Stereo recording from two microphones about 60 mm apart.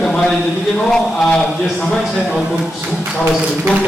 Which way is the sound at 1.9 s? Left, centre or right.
Centre.